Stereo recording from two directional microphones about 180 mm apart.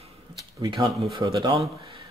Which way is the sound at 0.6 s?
25° right (ahead or behind).